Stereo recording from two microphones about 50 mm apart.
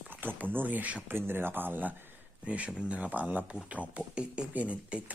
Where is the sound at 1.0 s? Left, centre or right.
Right.